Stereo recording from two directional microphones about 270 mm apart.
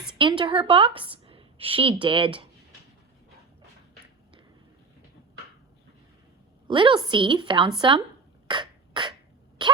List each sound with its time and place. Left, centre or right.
0.2 s a woman's voice: centre
6.7 s a woman's voice: centre
8.4 s beatboxing: centre